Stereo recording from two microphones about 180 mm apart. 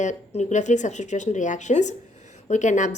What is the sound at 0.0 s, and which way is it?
A woman's voice, 40° left (ahead or behind).